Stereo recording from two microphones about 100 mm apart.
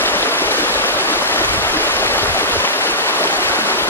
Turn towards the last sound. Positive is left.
turn(degrees=20)  # may be behind; listen again after turning